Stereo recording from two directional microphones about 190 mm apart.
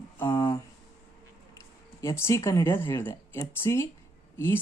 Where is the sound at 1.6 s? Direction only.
15° left (ahead or behind).